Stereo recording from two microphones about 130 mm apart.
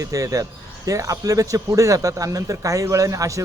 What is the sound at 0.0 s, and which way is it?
Speech, 25° right (ahead or behind).